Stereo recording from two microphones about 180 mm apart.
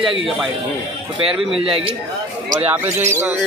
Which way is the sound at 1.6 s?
30° right (ahead or behind).